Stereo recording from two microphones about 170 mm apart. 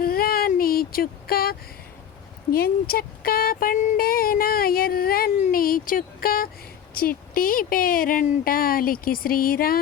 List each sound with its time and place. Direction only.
0.0 s female singing: 60° left (ahead or behind)
2.5 s speech: 60° left (ahead or behind)